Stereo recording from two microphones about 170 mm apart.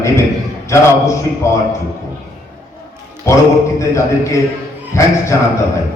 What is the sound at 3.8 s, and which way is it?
A man's voice, 15° left (ahead or behind).